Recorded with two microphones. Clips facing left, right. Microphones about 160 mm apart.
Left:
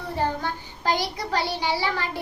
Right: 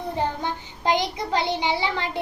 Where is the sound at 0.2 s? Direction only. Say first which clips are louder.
Left 1 dB; 20° right (ahead or behind).